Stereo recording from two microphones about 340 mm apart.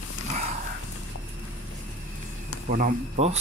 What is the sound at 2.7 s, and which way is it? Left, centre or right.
Speech, right.